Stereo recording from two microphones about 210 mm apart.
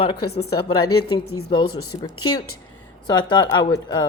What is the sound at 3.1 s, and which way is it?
Speech, 20° left (ahead or behind).